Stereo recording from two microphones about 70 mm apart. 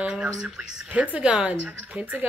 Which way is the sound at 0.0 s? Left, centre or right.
Centre.